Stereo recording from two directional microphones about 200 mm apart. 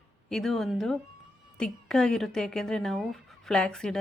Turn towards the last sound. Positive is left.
turn(degrees=0)  # may be behind; listen again after turning